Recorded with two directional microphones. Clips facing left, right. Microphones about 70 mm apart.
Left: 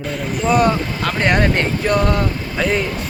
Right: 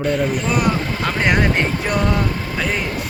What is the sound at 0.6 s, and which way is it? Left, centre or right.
Speech, centre.